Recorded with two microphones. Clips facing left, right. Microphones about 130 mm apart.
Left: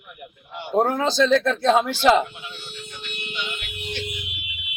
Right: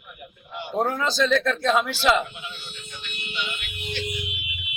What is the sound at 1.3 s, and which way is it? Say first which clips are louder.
Speech: left 3 dB; 30° left (ahead or behind).